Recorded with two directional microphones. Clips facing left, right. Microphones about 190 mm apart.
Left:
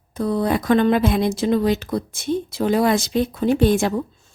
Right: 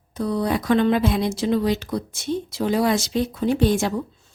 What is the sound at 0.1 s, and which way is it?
Speech, 50° left (ahead or behind).